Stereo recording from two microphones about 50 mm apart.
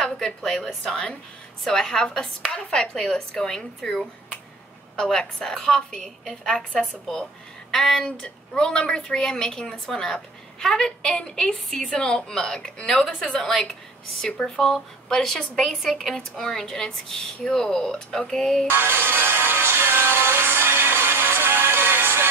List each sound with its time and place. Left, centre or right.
0.8 s a woman's voice: centre
16.2 s a woman's voice: centre
18.7 s music: right